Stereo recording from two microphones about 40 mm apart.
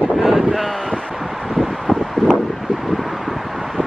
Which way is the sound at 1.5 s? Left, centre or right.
Centre.